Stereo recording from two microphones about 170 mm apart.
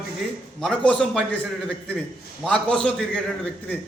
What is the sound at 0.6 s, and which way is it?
Speech, 5° left (ahead or behind).